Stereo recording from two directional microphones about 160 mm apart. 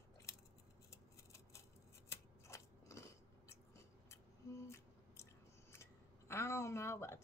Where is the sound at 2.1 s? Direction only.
20° left (ahead or behind).